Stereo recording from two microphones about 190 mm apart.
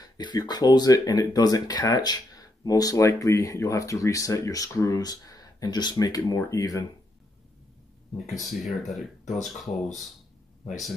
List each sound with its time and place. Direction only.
0.0 s speech: 20° left (ahead or behind)
8.4 s speech: centre (ahead or behind)